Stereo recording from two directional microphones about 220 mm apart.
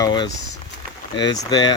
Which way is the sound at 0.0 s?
20° left (ahead or behind).